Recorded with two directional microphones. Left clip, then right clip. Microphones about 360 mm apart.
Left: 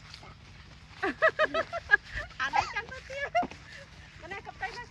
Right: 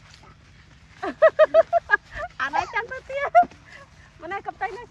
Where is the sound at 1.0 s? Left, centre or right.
Centre.